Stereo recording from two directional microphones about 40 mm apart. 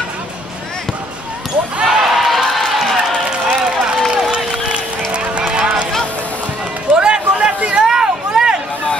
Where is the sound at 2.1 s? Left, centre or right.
Centre.